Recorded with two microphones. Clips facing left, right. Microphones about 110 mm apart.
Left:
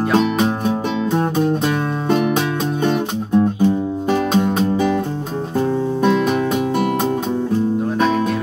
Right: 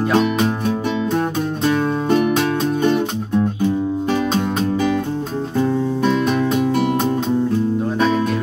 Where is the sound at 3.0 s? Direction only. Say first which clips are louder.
Left 3 dB; 10° left (ahead or behind).